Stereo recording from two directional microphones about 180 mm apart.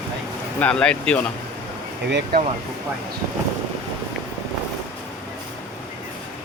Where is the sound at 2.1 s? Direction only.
70° right (ahead or behind).